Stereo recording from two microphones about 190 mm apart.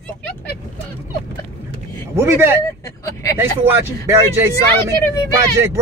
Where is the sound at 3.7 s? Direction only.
15° right (ahead or behind).